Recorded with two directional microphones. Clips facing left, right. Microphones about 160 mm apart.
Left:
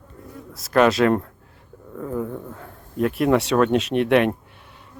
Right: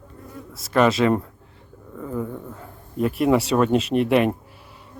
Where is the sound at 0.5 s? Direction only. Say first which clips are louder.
Left 1 dB; centre (ahead or behind).